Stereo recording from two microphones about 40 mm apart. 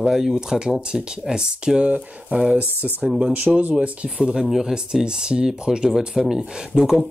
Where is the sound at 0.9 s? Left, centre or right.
Right.